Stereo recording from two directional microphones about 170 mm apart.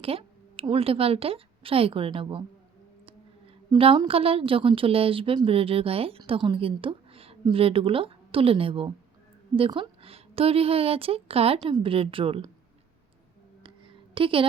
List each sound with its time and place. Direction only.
0.0 s a woman's voice: 35° right (ahead or behind)
3.7 s a woman's voice: 30° right (ahead or behind)
13.6 s a sound: 30° right (ahead or behind)